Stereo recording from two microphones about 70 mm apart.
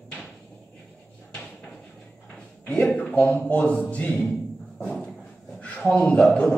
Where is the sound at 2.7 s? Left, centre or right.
Centre.